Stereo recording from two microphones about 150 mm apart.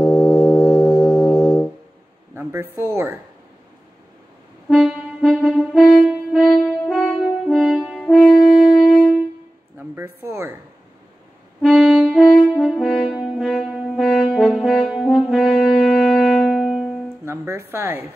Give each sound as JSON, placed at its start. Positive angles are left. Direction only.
{"t": 0.0, "sound": "music", "side_deg": 10}
{"t": 2.3, "sound": "a sound", "side_deg": -15}
{"t": 2.8, "sound": "speech", "side_deg": -15}
{"t": 4.6, "sound": "music", "side_deg": 0}
{"t": 9.8, "sound": "speech", "side_deg": -15}
{"t": 11.6, "sound": "brass instrument", "side_deg": 0}
{"t": 17.2, "sound": "a woman's voice", "side_deg": -15}